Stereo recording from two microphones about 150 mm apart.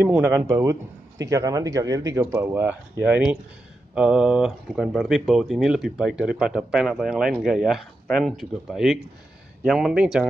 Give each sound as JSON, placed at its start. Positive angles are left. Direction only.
{"t": 0.0, "sound": "speech", "side_deg": -15}